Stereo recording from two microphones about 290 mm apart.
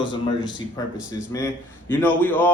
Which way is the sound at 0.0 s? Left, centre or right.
Centre.